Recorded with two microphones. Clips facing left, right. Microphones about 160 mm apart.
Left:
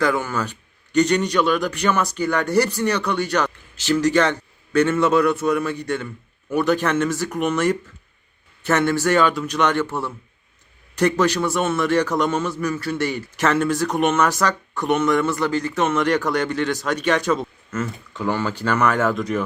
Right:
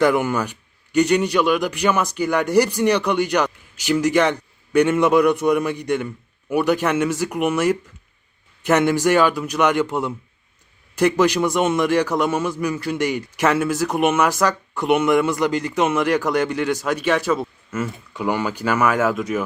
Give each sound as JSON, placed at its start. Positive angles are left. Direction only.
{"t": 0.0, "sound": "a man's voice", "side_deg": -15}